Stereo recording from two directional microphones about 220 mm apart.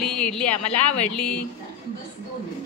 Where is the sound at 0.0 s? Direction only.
5° left (ahead or behind).